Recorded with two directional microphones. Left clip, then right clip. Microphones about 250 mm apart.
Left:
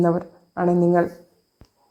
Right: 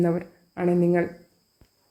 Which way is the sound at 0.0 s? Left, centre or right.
Centre.